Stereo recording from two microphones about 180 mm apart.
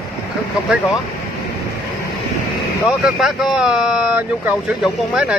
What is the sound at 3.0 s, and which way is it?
Speech, centre (ahead or behind).